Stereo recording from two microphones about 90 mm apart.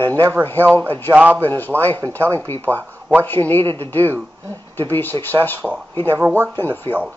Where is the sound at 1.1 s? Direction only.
20° right (ahead or behind).